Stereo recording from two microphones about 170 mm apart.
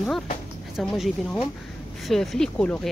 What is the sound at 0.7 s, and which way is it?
Speech, centre (ahead or behind).